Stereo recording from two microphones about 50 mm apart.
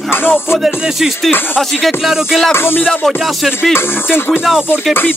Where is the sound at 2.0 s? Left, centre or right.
Centre.